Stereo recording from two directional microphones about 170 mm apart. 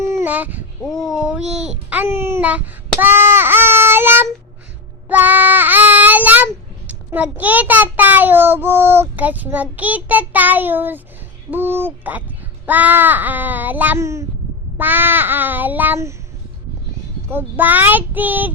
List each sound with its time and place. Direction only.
0.0 s a sound: 15° right (ahead or behind)
0.8 s a child's voice: centre (ahead or behind)
3.0 s child singing: 15° right (ahead or behind)
11.5 s a child's voice: 10° right (ahead or behind)
17.2 s a child's voice: 10° right (ahead or behind)